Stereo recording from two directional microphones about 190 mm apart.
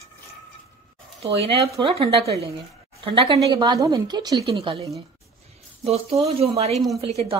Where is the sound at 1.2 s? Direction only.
30° right (ahead or behind).